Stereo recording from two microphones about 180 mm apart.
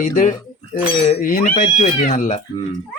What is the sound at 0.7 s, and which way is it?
Speech, 35° left (ahead or behind).